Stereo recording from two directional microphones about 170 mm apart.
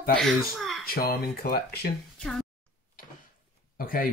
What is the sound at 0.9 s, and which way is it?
Speech, 65° left (ahead or behind).